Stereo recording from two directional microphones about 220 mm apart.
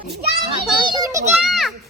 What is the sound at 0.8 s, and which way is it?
Speech, 20° right (ahead or behind).